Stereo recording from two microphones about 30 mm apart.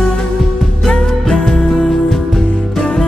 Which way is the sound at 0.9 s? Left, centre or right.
Centre.